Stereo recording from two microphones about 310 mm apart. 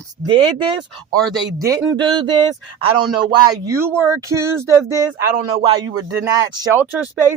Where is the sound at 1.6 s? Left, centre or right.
Centre.